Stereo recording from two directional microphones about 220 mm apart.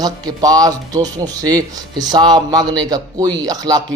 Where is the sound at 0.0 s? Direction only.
15° right (ahead or behind).